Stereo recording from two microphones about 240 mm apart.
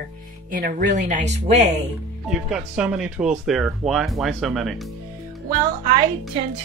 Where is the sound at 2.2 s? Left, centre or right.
Centre.